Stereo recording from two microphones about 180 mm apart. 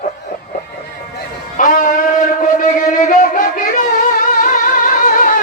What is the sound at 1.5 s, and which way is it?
Music, 45° left (ahead or behind).